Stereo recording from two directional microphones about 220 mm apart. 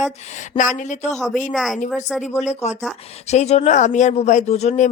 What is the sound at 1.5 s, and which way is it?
Speech, centre (ahead or behind).